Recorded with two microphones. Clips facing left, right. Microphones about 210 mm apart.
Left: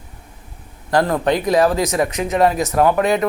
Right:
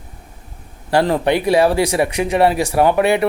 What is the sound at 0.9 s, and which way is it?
Speech, 10° right (ahead or behind).